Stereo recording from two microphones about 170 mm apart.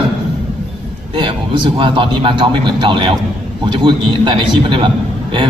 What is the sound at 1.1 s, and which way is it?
A man's voice, 30° right (ahead or behind).